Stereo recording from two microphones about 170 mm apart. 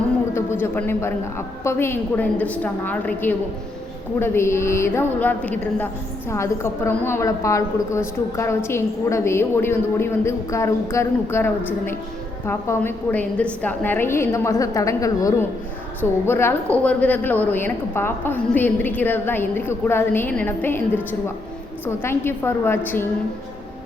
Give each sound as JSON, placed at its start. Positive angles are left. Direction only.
{"t": 0.6, "sound": "a woman's voice", "side_deg": 15}